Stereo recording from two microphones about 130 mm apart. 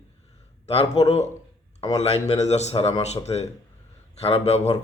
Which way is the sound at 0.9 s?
55° left (ahead or behind).